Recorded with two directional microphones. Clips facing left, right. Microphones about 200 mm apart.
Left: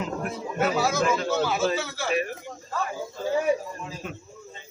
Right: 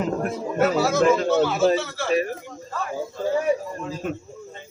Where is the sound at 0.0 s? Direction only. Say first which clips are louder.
Right 6 dB; 45° right (ahead or behind).